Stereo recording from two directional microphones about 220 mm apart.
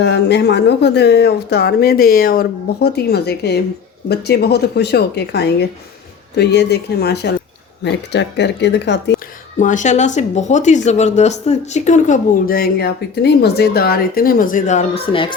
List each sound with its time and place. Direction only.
0.0 s speech: 50° left (ahead or behind)
9.6 s speech: 35° left (ahead or behind)